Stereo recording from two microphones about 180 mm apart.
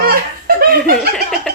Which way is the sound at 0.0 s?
55° right (ahead or behind).